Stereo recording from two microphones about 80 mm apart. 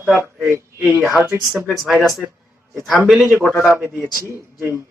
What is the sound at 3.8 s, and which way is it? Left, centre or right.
Speech, right.